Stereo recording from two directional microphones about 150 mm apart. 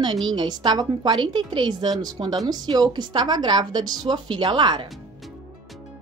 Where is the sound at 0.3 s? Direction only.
30° right (ahead or behind).